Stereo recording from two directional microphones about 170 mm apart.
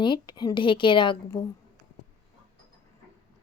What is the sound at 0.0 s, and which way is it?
Speech, 25° left (ahead or behind).